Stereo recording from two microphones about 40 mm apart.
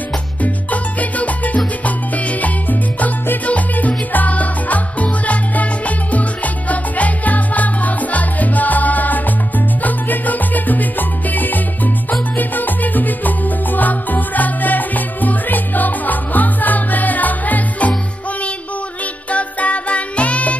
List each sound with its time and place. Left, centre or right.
0.4 s music: left
3.4 s music: left
9.8 s salsa music: left
19.3 s music: left